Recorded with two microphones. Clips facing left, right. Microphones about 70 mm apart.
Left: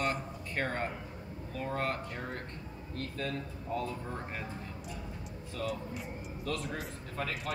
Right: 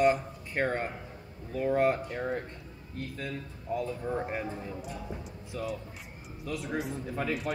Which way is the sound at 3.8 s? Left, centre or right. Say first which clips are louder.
Right 5 dB; centre.